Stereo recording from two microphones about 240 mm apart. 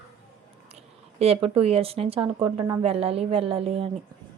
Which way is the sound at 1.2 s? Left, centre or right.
Right.